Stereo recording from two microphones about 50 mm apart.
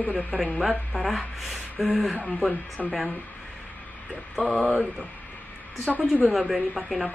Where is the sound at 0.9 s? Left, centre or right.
Centre.